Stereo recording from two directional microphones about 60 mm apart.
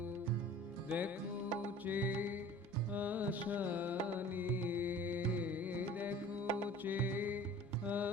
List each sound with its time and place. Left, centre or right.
0.9 s music: right